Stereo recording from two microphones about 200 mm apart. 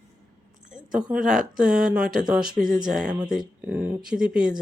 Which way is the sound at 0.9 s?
5° right (ahead or behind).